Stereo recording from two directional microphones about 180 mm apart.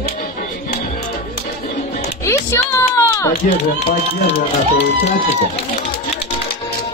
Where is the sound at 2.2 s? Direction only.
15° left (ahead or behind).